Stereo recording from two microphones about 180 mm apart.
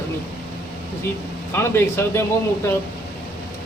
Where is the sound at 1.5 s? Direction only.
15° left (ahead or behind).